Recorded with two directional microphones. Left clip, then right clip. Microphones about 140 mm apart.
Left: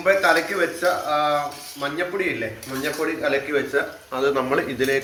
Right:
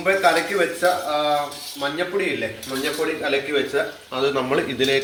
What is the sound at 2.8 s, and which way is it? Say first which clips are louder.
Speech: even; 15° right (ahead or behind).